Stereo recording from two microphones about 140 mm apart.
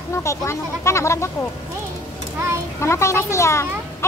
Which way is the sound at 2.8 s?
20° left (ahead or behind).